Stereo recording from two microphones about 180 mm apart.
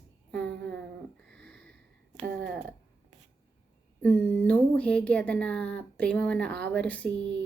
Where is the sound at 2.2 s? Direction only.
55° right (ahead or behind).